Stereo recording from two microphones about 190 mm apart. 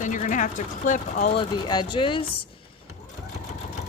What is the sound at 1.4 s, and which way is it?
Speech, 25° left (ahead or behind).